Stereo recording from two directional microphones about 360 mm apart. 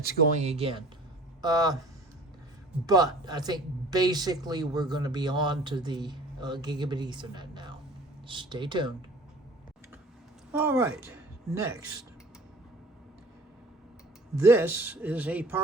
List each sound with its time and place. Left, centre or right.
0.0 s speech: right
2.8 s speech: centre
10.5 s speech: centre
14.3 s speech: centre